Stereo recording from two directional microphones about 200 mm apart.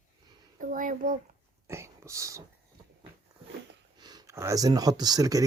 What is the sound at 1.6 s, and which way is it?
Whispering, 15° right (ahead or behind).